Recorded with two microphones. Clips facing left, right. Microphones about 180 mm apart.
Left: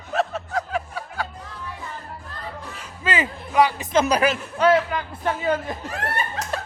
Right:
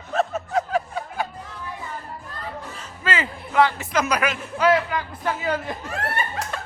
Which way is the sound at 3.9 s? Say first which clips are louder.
Left 4 dB; 30° left (ahead or behind).